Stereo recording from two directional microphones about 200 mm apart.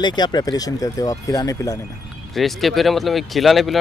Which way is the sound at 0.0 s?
20° left (ahead or behind).